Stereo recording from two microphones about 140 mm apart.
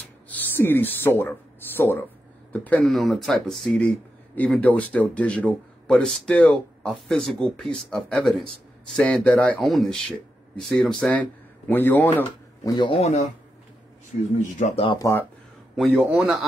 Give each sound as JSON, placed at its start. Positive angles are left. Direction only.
{"t": 0.3, "sound": "speech", "side_deg": 15}
{"t": 12.6, "sound": "speech", "side_deg": 30}
{"t": 12.9, "sound": "speech", "side_deg": 50}
{"t": 15.0, "sound": "speech", "side_deg": 25}
{"t": 15.7, "sound": "a man's voice", "side_deg": 0}